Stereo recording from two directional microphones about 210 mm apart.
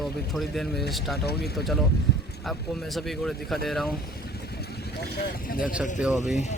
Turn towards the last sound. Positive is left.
turn(degrees=0)  # may be behind; listen again after turning